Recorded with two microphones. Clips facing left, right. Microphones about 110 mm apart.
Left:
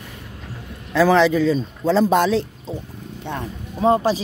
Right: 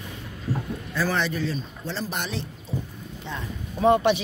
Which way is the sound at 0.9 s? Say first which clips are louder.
Left 11 dB; 90° left.